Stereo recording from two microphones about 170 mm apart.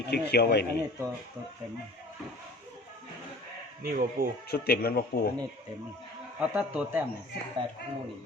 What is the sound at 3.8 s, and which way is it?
Speech, 55° right (ahead or behind).